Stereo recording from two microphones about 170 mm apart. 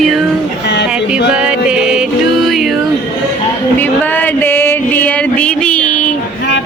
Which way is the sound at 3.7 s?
10° left (ahead or behind).